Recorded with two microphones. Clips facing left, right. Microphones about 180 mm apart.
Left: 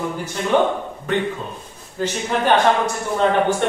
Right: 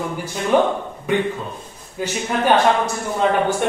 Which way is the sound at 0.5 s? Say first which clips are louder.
Right 1 dB; 10° right (ahead or behind).